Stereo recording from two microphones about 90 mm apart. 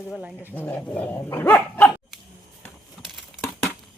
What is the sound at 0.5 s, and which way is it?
Dog, 15° left (ahead or behind).